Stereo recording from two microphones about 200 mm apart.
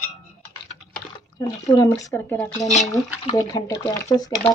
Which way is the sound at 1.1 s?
20° left (ahead or behind).